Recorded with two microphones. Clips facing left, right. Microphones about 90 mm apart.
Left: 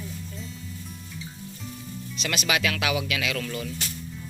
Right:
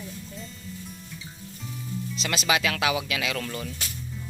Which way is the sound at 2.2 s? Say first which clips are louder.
Right 1 dB; 25° right (ahead or behind).